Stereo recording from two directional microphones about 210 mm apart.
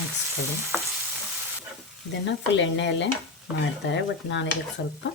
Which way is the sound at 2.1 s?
60° left (ahead or behind).